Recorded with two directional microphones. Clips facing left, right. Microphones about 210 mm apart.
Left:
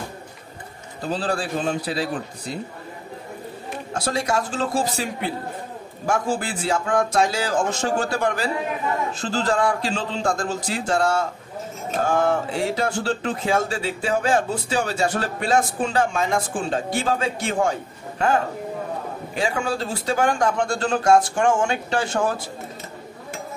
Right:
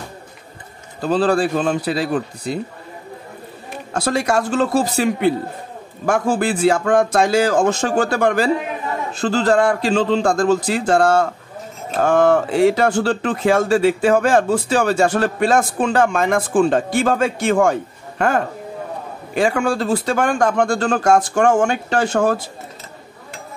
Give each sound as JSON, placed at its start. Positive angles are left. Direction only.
{"t": 1.0, "sound": "a man's voice", "side_deg": -70}
{"t": 3.9, "sound": "a man's voice", "side_deg": -70}
{"t": 12.1, "sound": "speech", "side_deg": -85}
{"t": 15.4, "sound": "speech", "side_deg": -55}